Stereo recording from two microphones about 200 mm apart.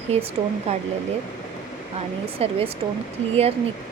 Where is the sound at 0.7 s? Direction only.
30° right (ahead or behind).